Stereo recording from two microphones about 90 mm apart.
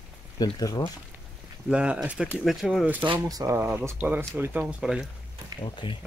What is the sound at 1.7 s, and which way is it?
Speech, 10° right (ahead or behind).